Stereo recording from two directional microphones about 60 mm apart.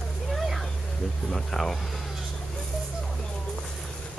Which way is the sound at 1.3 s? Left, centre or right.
Centre.